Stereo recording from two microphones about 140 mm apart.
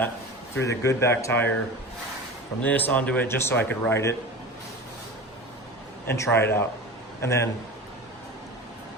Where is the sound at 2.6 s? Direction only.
10° left (ahead or behind).